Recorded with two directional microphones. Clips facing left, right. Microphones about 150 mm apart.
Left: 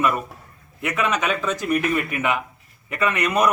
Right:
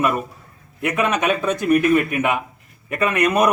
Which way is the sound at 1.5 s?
55° right (ahead or behind).